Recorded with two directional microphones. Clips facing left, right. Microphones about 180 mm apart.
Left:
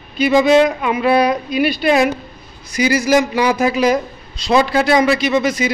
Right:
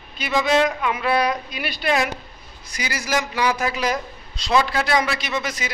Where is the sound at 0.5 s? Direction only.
15° left (ahead or behind).